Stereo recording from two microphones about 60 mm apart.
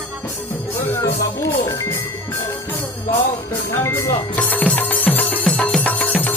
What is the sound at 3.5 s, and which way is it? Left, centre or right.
Speech, left.